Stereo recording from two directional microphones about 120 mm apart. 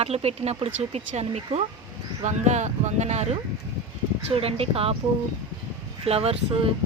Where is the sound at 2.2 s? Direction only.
75° right (ahead or behind).